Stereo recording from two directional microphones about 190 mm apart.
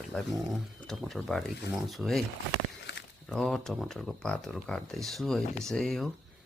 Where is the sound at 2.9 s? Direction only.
65° left (ahead or behind).